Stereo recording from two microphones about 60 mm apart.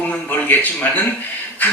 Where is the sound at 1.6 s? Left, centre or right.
Left.